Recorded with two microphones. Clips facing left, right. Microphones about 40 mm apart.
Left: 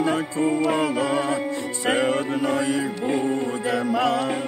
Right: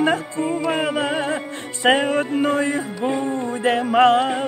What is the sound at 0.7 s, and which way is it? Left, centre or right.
Music, right.